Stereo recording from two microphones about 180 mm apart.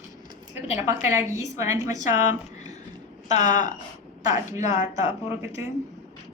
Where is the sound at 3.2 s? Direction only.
40° left (ahead or behind).